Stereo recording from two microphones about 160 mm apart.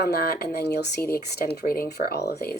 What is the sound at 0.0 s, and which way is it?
Speech, 75° left (ahead or behind).